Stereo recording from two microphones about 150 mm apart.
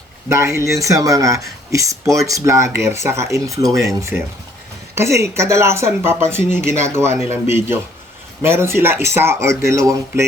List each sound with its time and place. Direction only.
0.3 s speech: 20° right (ahead or behind)
4.1 s speech: 5° right (ahead or behind)
4.9 s speech: 20° right (ahead or behind)